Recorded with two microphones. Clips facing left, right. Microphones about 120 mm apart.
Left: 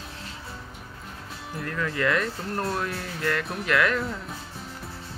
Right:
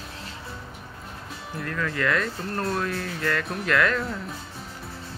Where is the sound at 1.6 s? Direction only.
15° left (ahead or behind).